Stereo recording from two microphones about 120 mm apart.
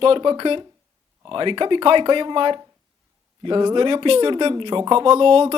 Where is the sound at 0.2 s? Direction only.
40° right (ahead or behind).